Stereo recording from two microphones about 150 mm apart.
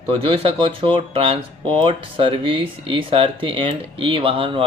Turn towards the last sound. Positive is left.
turn(degrees=-40)  # may be behind; listen again after turning